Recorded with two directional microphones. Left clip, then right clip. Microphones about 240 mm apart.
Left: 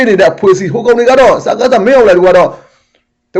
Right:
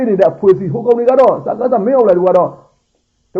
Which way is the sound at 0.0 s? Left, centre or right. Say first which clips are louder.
Left 4 dB; centre.